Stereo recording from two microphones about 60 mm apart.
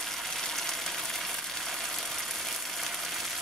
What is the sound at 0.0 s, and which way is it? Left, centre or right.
Frying, centre.